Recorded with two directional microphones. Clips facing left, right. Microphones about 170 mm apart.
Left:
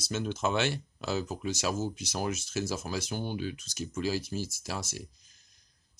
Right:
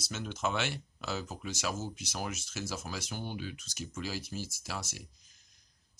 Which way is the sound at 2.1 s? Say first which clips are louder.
Left 6 dB; 35° left (ahead or behind).